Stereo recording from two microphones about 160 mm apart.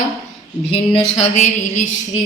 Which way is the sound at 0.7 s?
40° left (ahead or behind).